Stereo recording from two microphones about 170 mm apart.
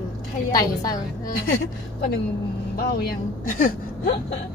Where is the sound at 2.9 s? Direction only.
55° left (ahead or behind).